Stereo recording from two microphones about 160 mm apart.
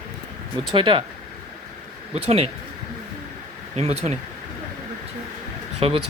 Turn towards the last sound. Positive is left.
turn(degrees=-35)  # may be behind; listen again after turning